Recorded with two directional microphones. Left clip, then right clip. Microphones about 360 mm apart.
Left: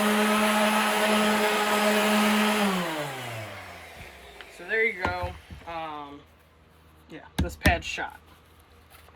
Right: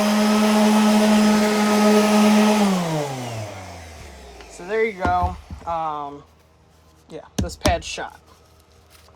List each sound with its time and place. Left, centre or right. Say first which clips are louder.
0.0 s blender: right 4 dB; right
4.4 s a sound: right 4 dB; centre
7.3 s speech: right 4 dB; centre